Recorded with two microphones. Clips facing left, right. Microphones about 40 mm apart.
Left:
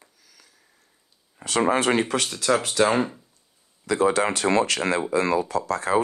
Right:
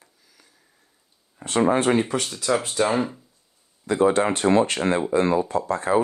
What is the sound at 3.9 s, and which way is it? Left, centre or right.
Speech, left.